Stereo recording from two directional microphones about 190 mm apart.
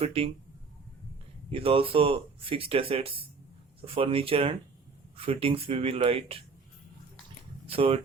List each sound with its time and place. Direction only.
0.0 s speech: 30° right (ahead or behind)
1.5 s speech: 30° right (ahead or behind)
7.7 s speech: 30° right (ahead or behind)